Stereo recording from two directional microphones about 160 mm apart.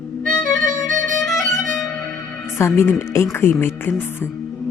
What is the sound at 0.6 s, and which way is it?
Music, 50° right (ahead or behind).